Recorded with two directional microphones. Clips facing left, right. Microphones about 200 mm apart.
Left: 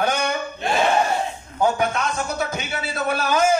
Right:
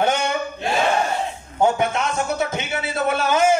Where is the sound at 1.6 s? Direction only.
25° right (ahead or behind).